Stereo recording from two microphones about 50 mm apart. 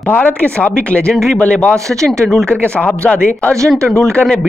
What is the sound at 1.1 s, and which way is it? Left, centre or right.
Speech, centre.